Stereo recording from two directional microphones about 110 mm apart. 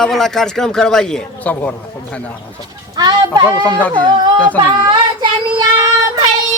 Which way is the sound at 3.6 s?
15° left (ahead or behind).